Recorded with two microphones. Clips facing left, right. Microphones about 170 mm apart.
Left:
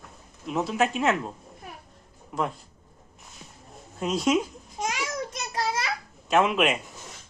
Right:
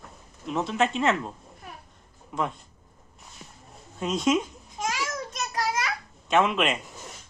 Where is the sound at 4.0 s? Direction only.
Centre (ahead or behind).